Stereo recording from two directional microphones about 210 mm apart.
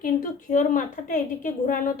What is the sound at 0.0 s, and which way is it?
A woman's voice, 40° left (ahead or behind).